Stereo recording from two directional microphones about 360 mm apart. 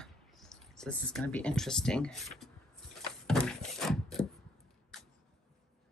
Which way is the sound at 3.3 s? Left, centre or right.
Centre.